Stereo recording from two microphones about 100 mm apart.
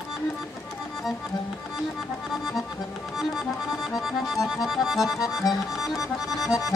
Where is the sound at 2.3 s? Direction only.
Centre (ahead or behind).